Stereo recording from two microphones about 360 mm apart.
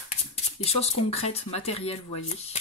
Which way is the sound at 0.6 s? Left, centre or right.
Centre.